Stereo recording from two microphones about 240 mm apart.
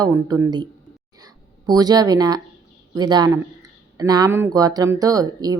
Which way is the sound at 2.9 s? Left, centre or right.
Centre.